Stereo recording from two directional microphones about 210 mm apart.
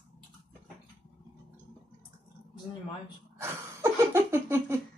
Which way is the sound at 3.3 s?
10° right (ahead or behind).